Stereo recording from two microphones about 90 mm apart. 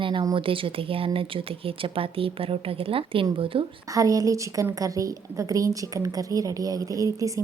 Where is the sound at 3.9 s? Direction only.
40° right (ahead or behind).